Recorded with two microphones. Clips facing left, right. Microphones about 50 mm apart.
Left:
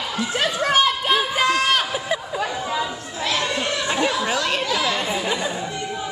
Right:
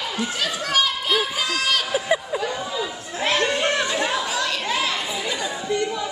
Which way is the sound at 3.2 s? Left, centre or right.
Right.